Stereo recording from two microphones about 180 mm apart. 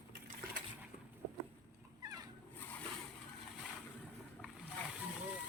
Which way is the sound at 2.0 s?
20° right (ahead or behind).